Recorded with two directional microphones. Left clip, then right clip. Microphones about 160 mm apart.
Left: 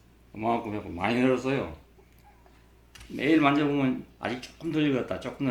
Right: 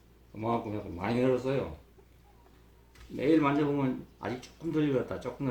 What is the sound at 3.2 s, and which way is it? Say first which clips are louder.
Speech: left 3 dB; 5° right (ahead or behind).